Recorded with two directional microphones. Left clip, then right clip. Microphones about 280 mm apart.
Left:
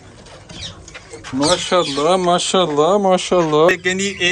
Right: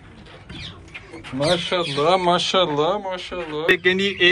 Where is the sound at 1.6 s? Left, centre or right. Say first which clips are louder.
Left 4 dB; centre.